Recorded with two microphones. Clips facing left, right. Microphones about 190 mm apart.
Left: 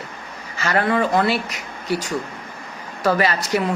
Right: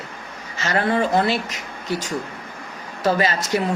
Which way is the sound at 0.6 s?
25° right (ahead or behind).